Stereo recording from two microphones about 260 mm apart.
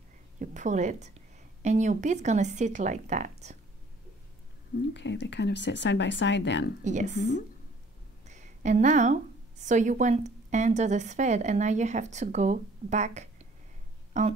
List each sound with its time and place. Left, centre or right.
0.4 s speech: right
4.7 s speech: left
6.8 s a woman's voice: right